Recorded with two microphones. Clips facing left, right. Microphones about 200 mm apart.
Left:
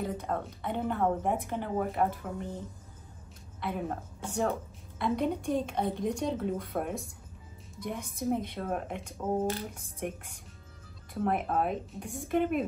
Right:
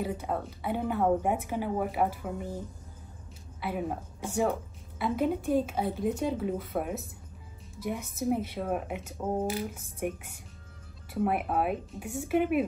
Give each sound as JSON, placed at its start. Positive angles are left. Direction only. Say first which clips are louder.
{"t": 0.0, "sound": "a woman's voice", "louder": "right 1 dB", "side_deg": -5}
{"t": 3.6, "sound": "a woman's voice", "louder": "right 1 dB", "side_deg": -5}
{"t": 11.1, "sound": "a woman's voice", "louder": "right 1 dB", "side_deg": -5}